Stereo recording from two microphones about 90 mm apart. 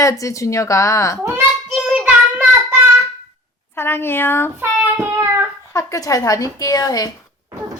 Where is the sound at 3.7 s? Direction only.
25° left (ahead or behind).